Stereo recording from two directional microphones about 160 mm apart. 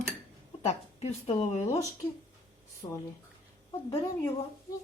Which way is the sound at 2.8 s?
25° left (ahead or behind).